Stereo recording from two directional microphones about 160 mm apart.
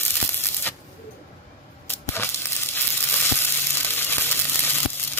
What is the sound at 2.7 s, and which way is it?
Sizzle, 15° left (ahead or behind).